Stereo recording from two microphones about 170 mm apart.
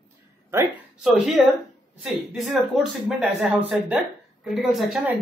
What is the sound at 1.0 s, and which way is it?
A man's voice, centre (ahead or behind).